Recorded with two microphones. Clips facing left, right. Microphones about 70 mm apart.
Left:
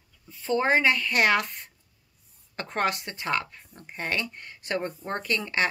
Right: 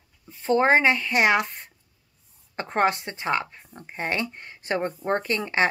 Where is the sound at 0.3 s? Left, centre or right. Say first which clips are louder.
Right 4 dB; right.